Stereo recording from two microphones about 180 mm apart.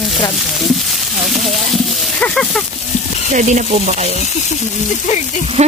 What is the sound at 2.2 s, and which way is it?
Speech, centre (ahead or behind).